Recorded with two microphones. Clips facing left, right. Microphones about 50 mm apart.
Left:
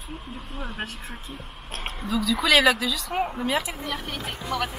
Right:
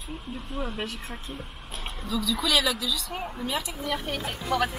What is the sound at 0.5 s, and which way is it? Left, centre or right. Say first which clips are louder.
Speech: right 2 dB; centre.